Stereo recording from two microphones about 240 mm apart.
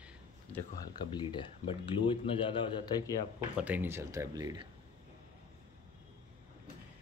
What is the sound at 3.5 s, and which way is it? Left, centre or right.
Speech, centre.